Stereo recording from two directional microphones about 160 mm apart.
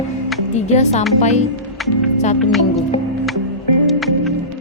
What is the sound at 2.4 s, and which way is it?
Speech, centre (ahead or behind).